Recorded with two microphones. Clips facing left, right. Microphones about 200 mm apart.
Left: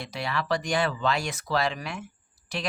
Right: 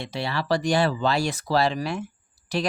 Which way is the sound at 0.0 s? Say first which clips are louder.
Right 3 dB; 30° right (ahead or behind).